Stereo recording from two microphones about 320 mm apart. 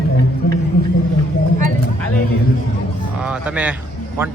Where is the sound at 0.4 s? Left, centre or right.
Left.